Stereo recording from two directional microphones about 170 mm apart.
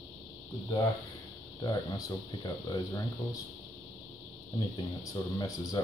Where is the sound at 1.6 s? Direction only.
25° left (ahead or behind).